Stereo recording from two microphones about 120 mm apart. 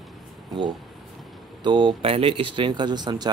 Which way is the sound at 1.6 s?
40° right (ahead or behind).